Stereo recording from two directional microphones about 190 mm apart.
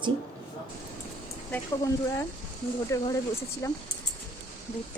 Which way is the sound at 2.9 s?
15° left (ahead or behind).